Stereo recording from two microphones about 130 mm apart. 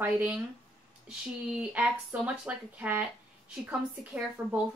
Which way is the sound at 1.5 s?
10° right (ahead or behind).